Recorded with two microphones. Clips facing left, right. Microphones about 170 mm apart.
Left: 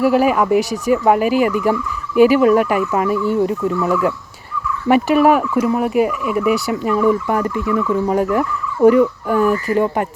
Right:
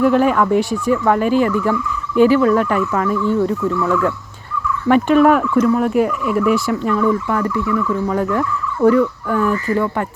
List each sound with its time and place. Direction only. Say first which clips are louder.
0.0 s speech: even; 5° left (ahead or behind)
4.9 s turkey: right 1 dB; 10° left (ahead or behind)
6.9 s speech: left 3 dB; 15° left (ahead or behind)